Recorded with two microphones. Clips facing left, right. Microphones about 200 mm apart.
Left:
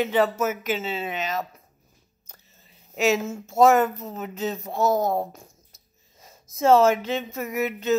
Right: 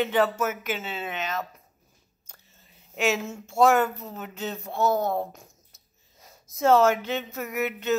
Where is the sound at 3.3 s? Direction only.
Centre (ahead or behind).